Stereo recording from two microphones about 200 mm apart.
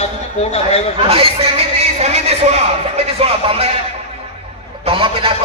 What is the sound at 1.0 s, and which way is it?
A man's voice, 30° right (ahead or behind).